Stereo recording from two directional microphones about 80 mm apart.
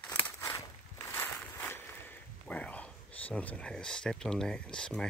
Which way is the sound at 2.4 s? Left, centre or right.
Centre.